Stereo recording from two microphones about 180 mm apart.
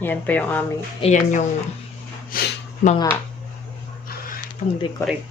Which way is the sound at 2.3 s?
55° left (ahead or behind).